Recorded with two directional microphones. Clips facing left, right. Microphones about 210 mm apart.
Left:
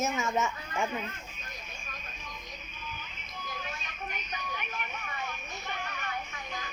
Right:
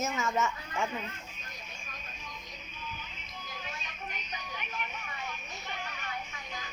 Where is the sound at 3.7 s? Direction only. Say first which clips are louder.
Left 2 dB; 55° left (ahead or behind).